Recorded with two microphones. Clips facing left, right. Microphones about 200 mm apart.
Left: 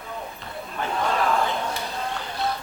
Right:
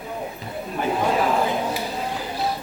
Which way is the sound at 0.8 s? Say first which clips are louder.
Right 3 dB; 15° right (ahead or behind).